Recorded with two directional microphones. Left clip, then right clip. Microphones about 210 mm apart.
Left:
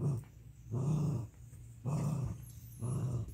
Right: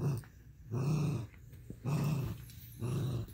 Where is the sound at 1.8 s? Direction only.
15° right (ahead or behind).